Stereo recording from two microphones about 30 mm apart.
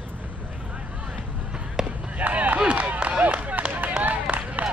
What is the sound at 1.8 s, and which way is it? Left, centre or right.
Basketball bounce, right.